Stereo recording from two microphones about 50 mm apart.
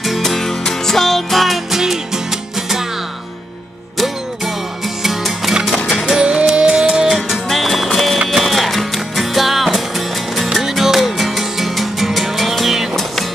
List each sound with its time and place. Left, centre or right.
0.0 s music: centre
5.0 s music: centre
7.1 s music: centre